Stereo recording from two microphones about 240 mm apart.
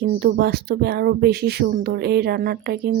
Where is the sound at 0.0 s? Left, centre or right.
Right.